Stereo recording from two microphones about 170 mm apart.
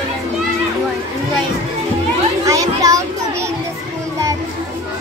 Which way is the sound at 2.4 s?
20° right (ahead or behind).